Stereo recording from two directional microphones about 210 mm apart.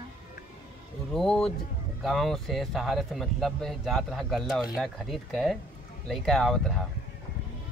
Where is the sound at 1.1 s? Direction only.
Centre (ahead or behind).